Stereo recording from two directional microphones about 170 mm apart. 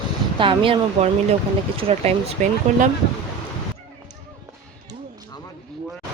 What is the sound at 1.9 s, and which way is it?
Speech, 40° right (ahead or behind).